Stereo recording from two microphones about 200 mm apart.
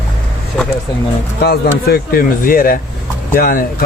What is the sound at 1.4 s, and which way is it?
Speech, 50° left (ahead or behind).